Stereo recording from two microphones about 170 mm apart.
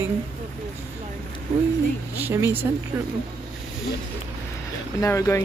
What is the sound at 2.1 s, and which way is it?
Speech, 10° right (ahead or behind).